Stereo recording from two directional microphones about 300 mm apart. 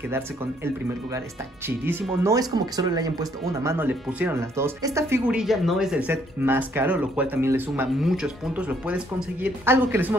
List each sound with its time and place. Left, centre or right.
1.7 s speech: centre